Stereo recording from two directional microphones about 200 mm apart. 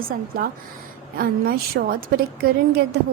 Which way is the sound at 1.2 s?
50° right (ahead or behind).